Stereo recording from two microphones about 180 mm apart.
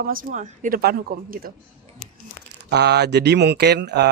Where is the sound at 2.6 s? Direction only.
70° right (ahead or behind).